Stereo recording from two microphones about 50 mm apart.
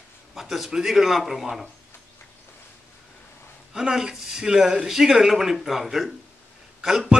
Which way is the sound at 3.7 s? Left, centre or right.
Centre.